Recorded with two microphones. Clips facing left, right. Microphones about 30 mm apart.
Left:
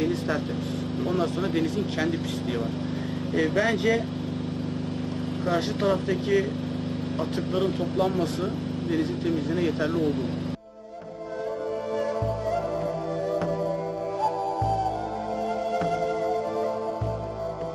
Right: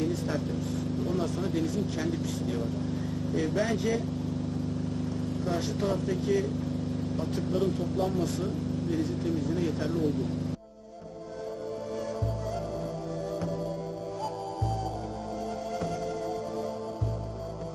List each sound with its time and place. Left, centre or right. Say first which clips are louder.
1.0 s speech: left 6 dB; left
3.7 s speech: left 5 dB; left
5.5 s speech: left 6 dB; left
7.5 s speech: left 4 dB; left
14.2 s music: left 10 dB; left